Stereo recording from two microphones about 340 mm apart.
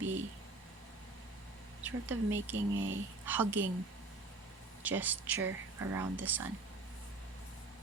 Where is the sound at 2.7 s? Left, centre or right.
Right.